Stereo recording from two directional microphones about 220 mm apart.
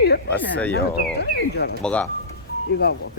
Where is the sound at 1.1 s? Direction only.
45° left (ahead or behind).